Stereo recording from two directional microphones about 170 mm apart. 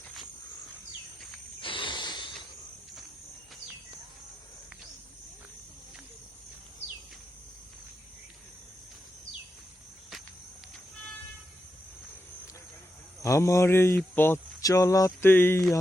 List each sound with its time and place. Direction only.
1.6 s cricket: 30° left (ahead or behind)
13.2 s speech: 15° left (ahead or behind)